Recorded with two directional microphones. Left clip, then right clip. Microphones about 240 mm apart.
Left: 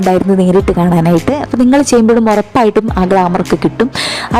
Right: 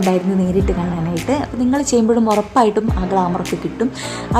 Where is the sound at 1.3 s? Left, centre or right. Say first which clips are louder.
Left 3 dB; left.